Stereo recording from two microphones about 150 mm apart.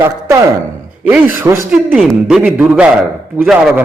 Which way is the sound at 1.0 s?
10° right (ahead or behind).